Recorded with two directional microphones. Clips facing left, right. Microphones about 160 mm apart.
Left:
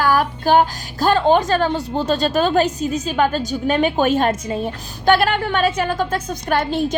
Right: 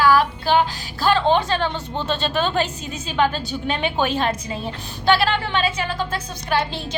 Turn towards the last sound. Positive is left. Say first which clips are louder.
# left 5 dB
turn(degrees=50)  # may be behind; listen again after turning